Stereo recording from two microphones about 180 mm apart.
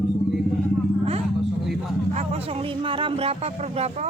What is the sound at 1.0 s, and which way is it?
Vehicle, 35° right (ahead or behind).